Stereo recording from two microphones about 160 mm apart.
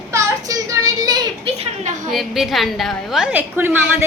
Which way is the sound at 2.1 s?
Centre (ahead or behind).